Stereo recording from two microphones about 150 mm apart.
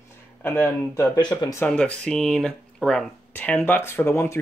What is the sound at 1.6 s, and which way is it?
Speech, 5° left (ahead or behind).